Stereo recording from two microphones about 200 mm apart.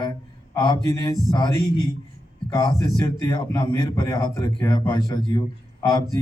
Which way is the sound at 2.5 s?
20° left (ahead or behind).